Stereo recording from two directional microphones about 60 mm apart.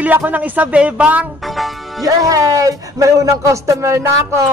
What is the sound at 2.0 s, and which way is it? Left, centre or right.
Speech, right.